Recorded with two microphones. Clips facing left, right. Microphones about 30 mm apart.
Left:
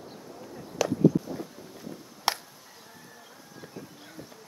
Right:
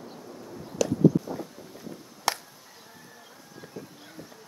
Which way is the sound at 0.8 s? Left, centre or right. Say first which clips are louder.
Right 1 dB; centre.